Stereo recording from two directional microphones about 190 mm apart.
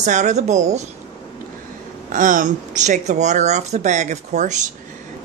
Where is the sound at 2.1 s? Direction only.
45° right (ahead or behind).